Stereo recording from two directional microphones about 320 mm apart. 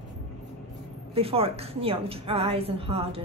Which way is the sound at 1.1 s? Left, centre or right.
Centre.